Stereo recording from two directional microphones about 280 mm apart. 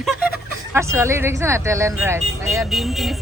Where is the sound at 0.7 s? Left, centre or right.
Centre.